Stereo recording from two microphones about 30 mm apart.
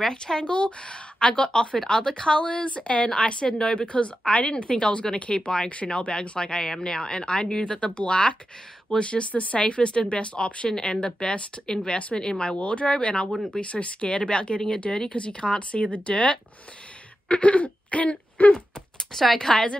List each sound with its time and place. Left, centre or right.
0.0 s speech: left
3.7 s speech: left
4.6 s speech: left
4.9 s speech: left
9.3 s speech: left
12.5 s speech: left
17.3 s throat clearing: left
19.3 s speech: left